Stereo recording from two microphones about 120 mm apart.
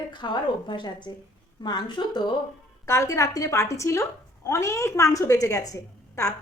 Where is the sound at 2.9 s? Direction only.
25° left (ahead or behind).